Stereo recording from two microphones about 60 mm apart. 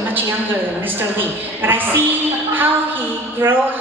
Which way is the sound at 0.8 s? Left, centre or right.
Right.